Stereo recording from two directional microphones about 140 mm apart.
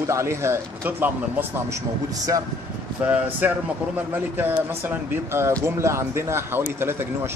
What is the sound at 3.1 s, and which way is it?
Speech, 10° right (ahead or behind).